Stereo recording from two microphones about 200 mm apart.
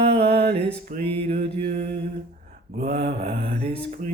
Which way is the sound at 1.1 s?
30° right (ahead or behind).